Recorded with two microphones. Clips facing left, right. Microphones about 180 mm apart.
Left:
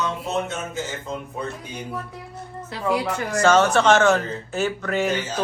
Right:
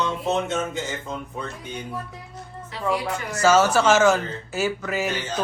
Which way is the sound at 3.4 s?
5° right (ahead or behind).